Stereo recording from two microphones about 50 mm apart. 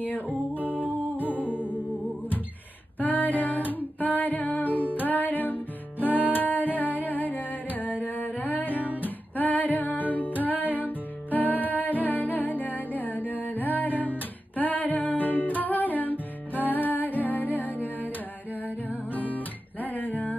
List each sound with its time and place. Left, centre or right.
0.5 s music: right
1.3 s music: left
3.0 s female singing: left
8.0 s music: left